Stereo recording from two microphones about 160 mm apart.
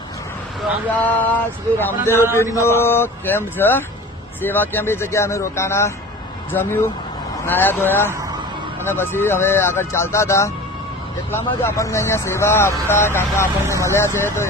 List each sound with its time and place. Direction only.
0.9 s speech: 10° left (ahead or behind)
13.7 s speech: 20° right (ahead or behind)
13.9 s speech: 15° left (ahead or behind)